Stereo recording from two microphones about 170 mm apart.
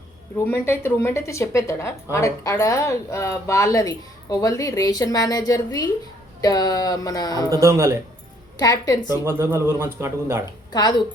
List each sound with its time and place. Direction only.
0.3 s a woman's voice: 15° left (ahead or behind)
7.5 s a man's voice: 20° right (ahead or behind)
8.5 s a woman's voice: 20° left (ahead or behind)
9.2 s a man's voice: 15° right (ahead or behind)
10.7 s speech: 25° left (ahead or behind)